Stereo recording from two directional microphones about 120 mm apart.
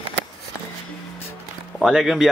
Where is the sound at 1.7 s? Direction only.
Centre (ahead or behind).